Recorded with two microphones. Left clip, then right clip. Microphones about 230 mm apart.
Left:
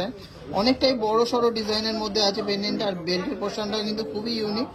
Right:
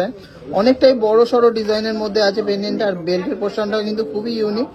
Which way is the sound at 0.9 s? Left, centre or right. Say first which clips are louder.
Right 9 dB; left.